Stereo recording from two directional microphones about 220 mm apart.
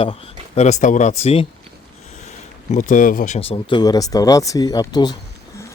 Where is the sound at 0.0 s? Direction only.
30° left (ahead or behind).